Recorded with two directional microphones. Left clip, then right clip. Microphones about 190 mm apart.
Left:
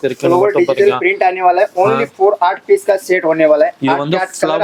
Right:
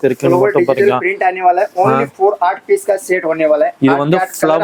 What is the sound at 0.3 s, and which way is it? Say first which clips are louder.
Speech: left 2 dB; 45° left (ahead or behind).